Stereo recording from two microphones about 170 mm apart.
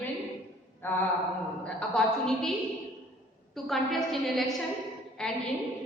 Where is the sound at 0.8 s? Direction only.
10° left (ahead or behind).